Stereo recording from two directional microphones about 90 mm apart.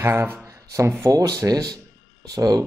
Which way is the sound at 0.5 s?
35° right (ahead or behind).